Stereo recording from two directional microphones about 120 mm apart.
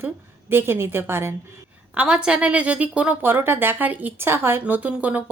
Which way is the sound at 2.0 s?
5° right (ahead or behind).